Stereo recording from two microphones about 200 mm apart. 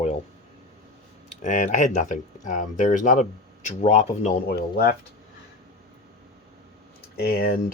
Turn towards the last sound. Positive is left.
turn(degrees=50)  # may be behind; listen again after turning